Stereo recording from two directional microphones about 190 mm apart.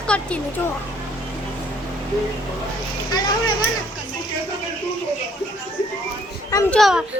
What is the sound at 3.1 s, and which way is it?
Speech, 20° left (ahead or behind).